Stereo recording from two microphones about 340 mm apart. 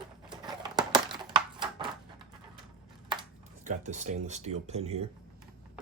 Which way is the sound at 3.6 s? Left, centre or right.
Right.